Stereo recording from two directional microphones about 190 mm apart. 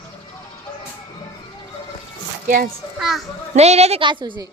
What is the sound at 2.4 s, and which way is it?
Speech, 50° right (ahead or behind).